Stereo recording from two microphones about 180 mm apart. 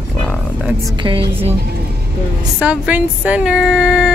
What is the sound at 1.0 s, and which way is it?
Speech, 30° right (ahead or behind).